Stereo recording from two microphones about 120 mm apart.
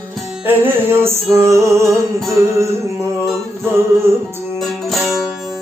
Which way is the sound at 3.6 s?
20° right (ahead or behind).